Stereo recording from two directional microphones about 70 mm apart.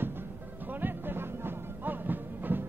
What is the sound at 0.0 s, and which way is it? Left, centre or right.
Music, right.